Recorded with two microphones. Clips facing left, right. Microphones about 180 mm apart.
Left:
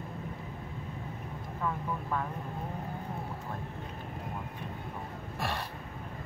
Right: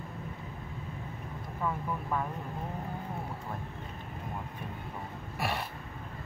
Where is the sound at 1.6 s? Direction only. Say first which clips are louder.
Right 1 dB; 10° right (ahead or behind).